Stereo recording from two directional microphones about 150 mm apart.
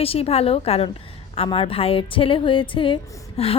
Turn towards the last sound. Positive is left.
turn(degrees=40)  # may be behind; listen again after turning